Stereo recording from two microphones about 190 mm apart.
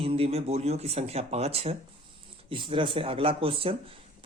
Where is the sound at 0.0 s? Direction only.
30° right (ahead or behind).